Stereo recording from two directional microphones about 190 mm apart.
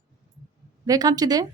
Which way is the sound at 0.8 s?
20° right (ahead or behind).